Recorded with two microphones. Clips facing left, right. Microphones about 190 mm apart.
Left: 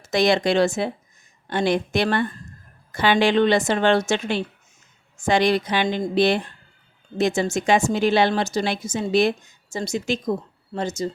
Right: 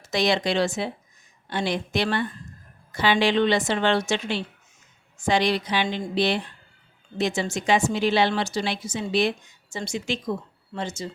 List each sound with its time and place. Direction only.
0.0 s a woman's voice: 50° left (ahead or behind)